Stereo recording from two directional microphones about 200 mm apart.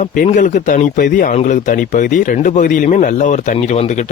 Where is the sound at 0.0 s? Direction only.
40° left (ahead or behind).